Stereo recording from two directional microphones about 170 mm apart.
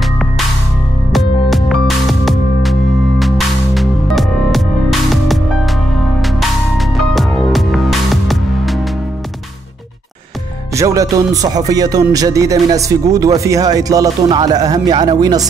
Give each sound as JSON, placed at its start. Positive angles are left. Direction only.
{"t": 1.1, "sound": "music", "side_deg": 0}
{"t": 10.7, "sound": "speech", "side_deg": -20}